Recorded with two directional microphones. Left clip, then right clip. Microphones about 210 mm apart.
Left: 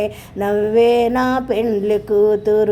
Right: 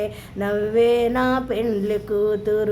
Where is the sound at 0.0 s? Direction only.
20° left (ahead or behind).